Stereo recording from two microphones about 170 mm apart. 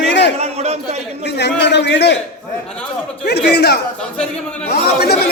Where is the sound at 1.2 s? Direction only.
85° left.